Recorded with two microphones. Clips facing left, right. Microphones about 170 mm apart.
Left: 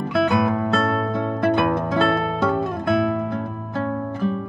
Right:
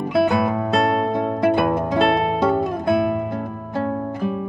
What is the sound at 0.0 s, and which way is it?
Music, 10° right (ahead or behind).